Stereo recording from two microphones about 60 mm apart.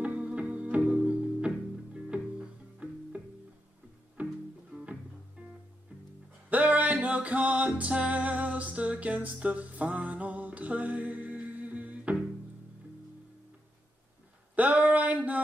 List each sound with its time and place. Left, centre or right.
0.0 s music: right
2.8 s music: right
4.2 s music: right
5.4 s music: centre
6.5 s music: right
14.5 s a sound: right